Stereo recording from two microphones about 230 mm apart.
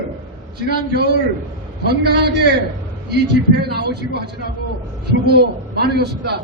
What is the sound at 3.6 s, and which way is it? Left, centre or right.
A man's voice, right.